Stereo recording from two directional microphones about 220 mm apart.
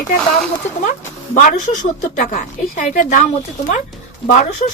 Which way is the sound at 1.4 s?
35° left (ahead or behind).